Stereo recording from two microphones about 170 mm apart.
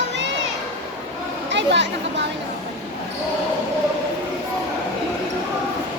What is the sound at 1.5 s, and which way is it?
Chatter, 90° right.